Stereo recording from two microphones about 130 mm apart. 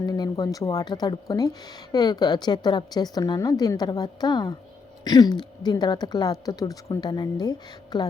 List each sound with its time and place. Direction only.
0.0 s speech: 30° left (ahead or behind)